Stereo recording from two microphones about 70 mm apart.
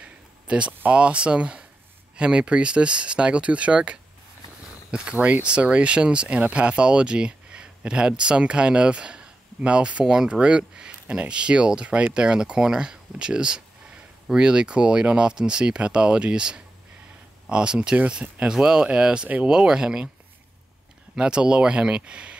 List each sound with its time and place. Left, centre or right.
0.0 s a sound: centre
0.7 s speech: centre
21.2 s speech: centre